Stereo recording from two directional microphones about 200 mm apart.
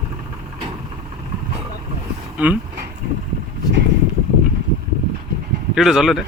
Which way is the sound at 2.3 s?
10° right (ahead or behind).